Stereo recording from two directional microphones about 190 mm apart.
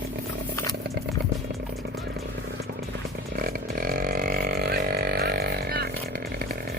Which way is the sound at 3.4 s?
50° right (ahead or behind).